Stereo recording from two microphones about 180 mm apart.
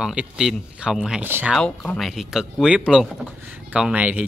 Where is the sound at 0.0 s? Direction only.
5° right (ahead or behind).